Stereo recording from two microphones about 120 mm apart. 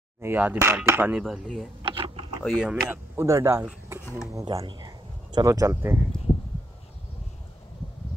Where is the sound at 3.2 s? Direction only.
25° right (ahead or behind).